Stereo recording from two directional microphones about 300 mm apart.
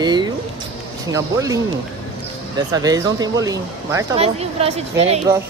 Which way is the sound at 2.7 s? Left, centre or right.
Centre.